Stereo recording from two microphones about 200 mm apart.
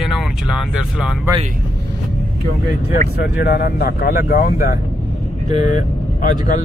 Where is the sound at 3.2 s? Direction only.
50° left (ahead or behind).